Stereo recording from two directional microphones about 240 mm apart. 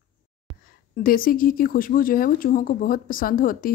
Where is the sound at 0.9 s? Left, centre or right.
Left.